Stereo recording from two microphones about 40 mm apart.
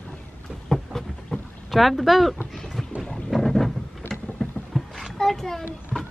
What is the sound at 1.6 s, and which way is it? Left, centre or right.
Speech, centre.